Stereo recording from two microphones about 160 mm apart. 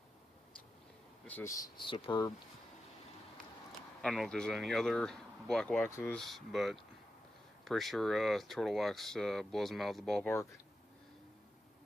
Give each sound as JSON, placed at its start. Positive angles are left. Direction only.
{"t": 1.2, "sound": "speech", "side_deg": 15}
{"t": 4.0, "sound": "speech", "side_deg": 0}
{"t": 5.9, "sound": "speech", "side_deg": 15}
{"t": 6.1, "sound": "speech", "side_deg": 0}